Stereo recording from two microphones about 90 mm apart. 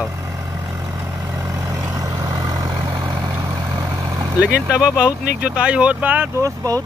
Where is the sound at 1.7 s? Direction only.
40° right (ahead or behind).